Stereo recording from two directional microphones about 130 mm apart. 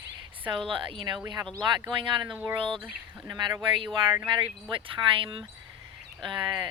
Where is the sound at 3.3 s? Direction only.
35° right (ahead or behind).